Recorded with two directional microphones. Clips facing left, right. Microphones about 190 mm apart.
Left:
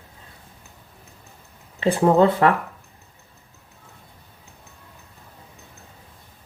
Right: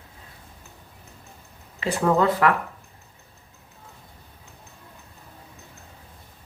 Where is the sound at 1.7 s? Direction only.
30° left (ahead or behind).